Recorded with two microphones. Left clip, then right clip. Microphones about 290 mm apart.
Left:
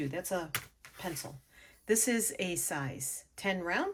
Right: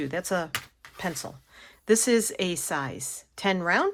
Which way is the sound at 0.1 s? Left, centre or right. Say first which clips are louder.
Right 7 dB; right.